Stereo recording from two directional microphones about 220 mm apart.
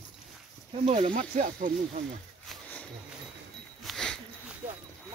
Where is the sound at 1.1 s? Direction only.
35° right (ahead or behind).